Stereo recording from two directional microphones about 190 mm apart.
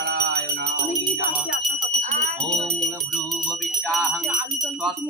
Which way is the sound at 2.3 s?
Centre (ahead or behind).